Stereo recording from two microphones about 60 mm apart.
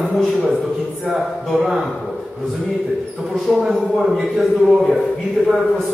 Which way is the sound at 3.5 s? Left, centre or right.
Centre.